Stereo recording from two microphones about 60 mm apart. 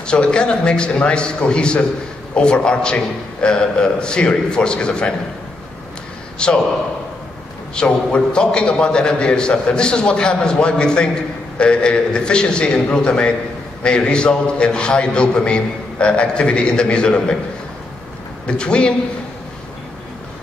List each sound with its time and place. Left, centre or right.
0.0 s a man's voice: centre
6.3 s a man's voice: centre
7.7 s a man's voice: centre
18.5 s a man's voice: centre